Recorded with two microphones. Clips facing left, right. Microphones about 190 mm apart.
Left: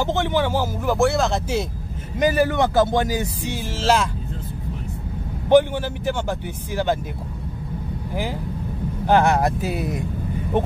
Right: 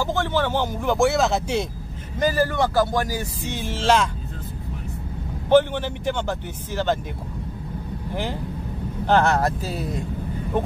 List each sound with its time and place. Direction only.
0.0 s speech: 20° left (ahead or behind); by 1.7 s centre (ahead or behind)
2.1 s speech: 20° left (ahead or behind)
3.5 s speech: 5° left (ahead or behind)
5.5 s speech: 10° left (ahead or behind)
8.1 s speech: 5° left (ahead or behind)